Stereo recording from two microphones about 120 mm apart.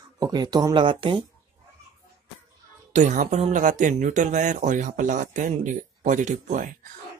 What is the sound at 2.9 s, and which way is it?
Speech, 80° right.